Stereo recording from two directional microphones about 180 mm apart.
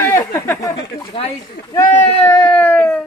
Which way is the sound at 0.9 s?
30° left (ahead or behind).